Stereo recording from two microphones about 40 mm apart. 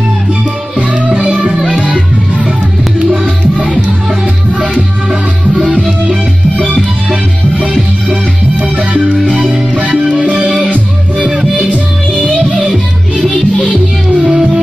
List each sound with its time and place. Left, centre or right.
0.7 s music: right
3.1 s music: right
5.5 s music: centre
7.1 s music: right
10.4 s music: centre
14.2 s music: centre